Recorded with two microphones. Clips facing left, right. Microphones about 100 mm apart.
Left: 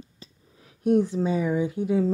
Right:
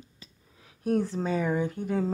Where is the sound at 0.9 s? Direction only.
15° left (ahead or behind).